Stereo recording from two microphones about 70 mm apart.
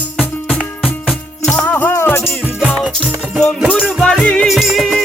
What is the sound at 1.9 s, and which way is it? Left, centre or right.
Music, left.